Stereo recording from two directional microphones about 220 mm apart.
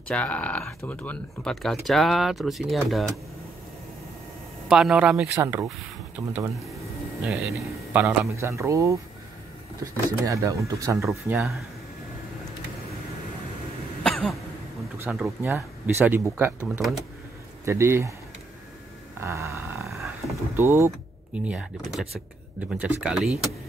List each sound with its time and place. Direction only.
0.1 s speech: 5° left (ahead or behind)
4.6 s speech: 5° right (ahead or behind)
7.9 s speech: 5° right (ahead or behind)
11.0 s speech: centre (ahead or behind)
14.0 s throat clearing: centre (ahead or behind)
15.0 s speech: 5° right (ahead or behind)
17.6 s speech: 10° right (ahead or behind)
19.1 s a sound: 15° right (ahead or behind)
20.2 s speech: 15° right (ahead or behind)